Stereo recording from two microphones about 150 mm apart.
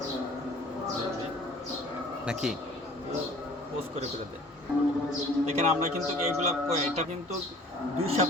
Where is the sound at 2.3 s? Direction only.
5° right (ahead or behind).